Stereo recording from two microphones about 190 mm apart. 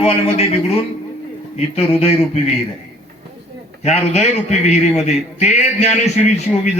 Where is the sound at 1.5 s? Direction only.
30° left (ahead or behind).